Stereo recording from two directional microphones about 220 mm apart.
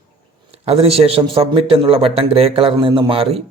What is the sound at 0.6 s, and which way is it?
A man's voice, 25° right (ahead or behind).